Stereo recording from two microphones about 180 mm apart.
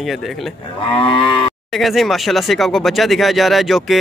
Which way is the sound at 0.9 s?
30° left (ahead or behind).